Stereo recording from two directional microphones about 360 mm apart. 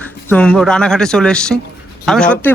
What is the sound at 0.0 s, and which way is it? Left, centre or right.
Speech, centre.